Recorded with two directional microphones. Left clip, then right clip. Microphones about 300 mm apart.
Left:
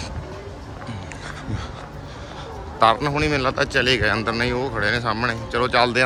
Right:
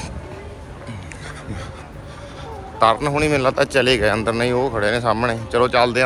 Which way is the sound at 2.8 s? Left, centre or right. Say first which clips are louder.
Right 1 dB; centre.